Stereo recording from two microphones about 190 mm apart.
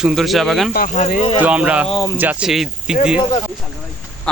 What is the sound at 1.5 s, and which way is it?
Speech, 5° right (ahead or behind).